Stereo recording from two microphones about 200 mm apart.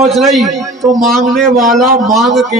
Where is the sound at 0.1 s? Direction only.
Centre (ahead or behind).